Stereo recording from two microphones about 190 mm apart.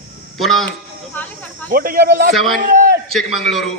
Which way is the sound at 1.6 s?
50° right (ahead or behind).